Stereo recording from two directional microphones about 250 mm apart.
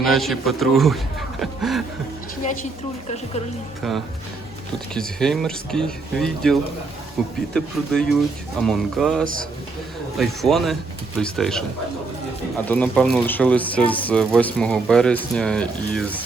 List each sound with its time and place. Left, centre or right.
0.0 s speech: centre
4.9 s speech: centre
9.2 s a man's voice: right
10.2 s speech: centre